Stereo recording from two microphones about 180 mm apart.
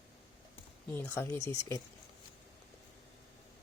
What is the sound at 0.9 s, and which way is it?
Speech, 10° left (ahead or behind).